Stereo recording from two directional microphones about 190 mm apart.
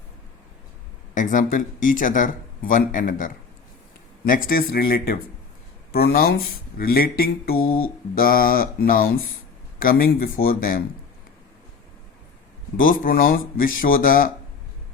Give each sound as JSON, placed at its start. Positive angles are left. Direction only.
{"t": 1.1, "sound": "speech", "side_deg": 40}
{"t": 4.4, "sound": "speech", "side_deg": 50}
{"t": 12.8, "sound": "speech", "side_deg": 45}